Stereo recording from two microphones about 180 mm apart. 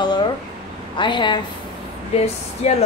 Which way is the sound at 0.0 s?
25° left (ahead or behind).